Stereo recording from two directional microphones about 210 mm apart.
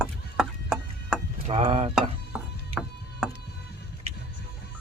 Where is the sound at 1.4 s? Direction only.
25° right (ahead or behind).